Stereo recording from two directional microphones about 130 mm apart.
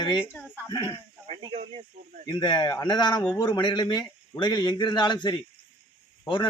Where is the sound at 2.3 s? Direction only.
30° left (ahead or behind).